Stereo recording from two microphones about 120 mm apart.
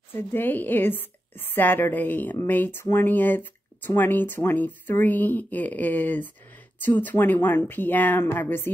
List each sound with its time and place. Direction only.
0.1 s speech: 15° left (ahead or behind)